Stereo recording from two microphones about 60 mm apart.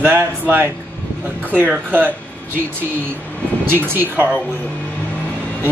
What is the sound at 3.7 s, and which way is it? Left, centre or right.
Speech, right.